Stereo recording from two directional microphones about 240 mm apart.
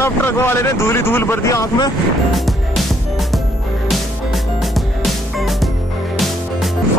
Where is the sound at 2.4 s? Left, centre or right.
Centre.